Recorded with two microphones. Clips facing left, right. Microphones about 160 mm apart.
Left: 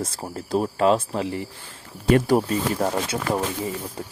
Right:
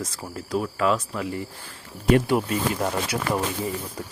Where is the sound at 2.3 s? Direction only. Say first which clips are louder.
Left 3 dB; 35° left (ahead or behind).